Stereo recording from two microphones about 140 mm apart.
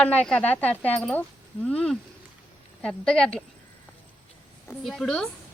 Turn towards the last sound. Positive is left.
turn(degrees=0)  # may be behind; listen again after turning